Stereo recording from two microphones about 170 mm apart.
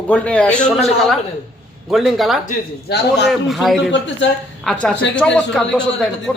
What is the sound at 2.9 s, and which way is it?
Speech, 75° left (ahead or behind).